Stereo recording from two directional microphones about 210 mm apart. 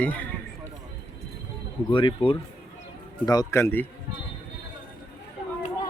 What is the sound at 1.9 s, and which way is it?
Speech, 25° left (ahead or behind).